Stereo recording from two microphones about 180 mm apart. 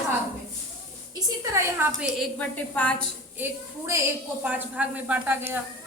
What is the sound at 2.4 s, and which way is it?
Speech, 10° left (ahead or behind).